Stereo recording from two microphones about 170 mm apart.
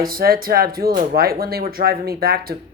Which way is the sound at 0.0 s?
60° right (ahead or behind).